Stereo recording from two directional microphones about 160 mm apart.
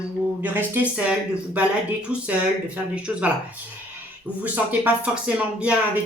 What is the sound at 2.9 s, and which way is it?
Speech, 10° right (ahead or behind).